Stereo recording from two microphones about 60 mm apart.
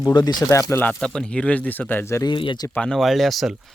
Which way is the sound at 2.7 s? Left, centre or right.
Centre.